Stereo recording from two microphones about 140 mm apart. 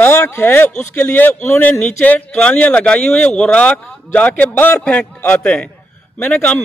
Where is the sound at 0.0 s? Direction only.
15° left (ahead or behind).